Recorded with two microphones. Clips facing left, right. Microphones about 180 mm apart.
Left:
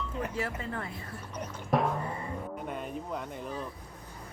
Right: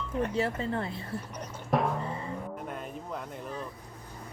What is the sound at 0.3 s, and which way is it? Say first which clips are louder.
Speech: right 5 dB; 30° right (ahead or behind).